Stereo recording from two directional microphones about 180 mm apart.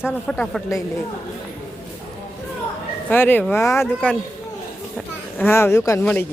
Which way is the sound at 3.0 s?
10° left (ahead or behind).